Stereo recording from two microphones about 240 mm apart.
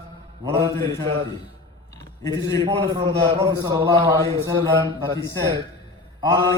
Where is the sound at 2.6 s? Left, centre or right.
Centre.